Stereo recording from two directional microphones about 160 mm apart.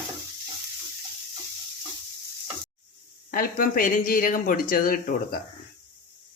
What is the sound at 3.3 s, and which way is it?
Speech, 65° left (ahead or behind).